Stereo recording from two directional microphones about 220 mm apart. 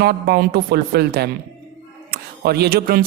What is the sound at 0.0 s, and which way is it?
Speech, 45° right (ahead or behind).